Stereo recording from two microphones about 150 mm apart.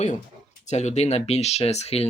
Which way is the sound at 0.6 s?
50° left (ahead or behind).